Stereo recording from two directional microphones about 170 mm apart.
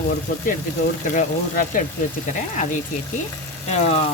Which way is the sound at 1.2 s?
50° left (ahead or behind).